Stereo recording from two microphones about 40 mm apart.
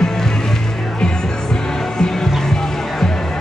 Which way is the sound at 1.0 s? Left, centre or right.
Centre.